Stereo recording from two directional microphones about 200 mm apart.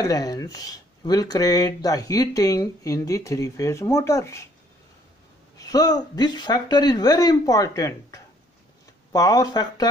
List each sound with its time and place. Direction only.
0.0 s speech: 20° left (ahead or behind)
5.6 s speech: 20° left (ahead or behind)